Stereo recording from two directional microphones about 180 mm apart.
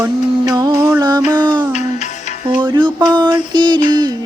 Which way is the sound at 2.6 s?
25° right (ahead or behind).